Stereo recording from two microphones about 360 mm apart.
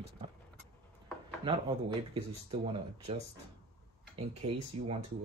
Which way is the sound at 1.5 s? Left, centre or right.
Centre.